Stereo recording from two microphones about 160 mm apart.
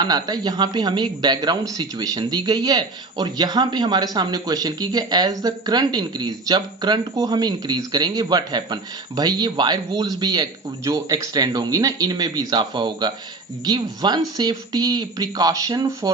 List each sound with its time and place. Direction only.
0.0 s speech: 25° right (ahead or behind)